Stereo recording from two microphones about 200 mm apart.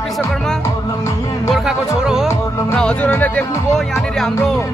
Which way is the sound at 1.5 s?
Centre (ahead or behind).